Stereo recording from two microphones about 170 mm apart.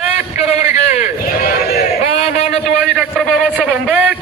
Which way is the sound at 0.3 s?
40° left (ahead or behind).